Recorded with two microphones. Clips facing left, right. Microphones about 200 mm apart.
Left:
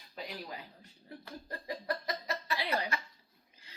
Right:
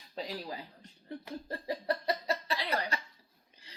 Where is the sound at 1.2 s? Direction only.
30° right (ahead or behind).